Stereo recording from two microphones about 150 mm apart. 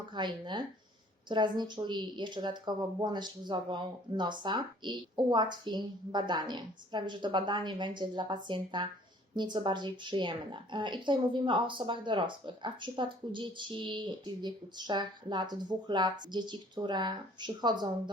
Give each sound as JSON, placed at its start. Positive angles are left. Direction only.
{"t": 0.1, "sound": "a woman's voice", "side_deg": -30}